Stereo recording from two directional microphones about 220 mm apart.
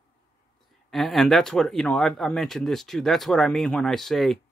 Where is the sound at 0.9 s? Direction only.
Centre (ahead or behind).